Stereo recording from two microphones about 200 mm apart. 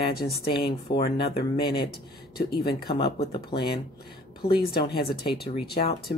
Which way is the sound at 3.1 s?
25° left (ahead or behind).